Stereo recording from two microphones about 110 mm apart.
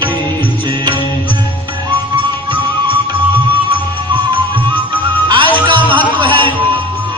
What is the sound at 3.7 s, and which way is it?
Music, 50° right (ahead or behind).